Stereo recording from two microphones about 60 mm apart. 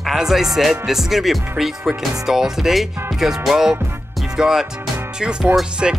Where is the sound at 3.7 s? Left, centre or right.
Right.